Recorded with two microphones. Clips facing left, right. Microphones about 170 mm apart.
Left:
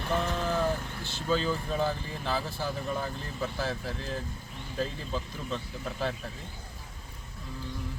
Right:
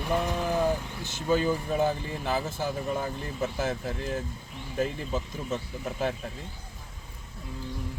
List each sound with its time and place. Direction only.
0.0 s speech: 10° right (ahead or behind)